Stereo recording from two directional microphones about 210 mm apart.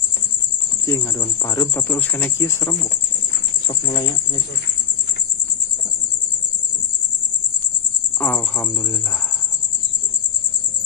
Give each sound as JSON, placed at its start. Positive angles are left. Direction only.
{"t": 0.8, "sound": "speech", "side_deg": 15}
{"t": 8.2, "sound": "speech", "side_deg": 5}